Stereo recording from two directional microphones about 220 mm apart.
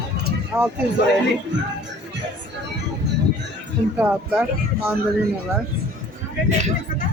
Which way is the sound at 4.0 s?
5° right (ahead or behind).